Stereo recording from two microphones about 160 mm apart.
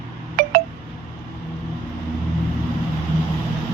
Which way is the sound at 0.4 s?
75° right (ahead or behind).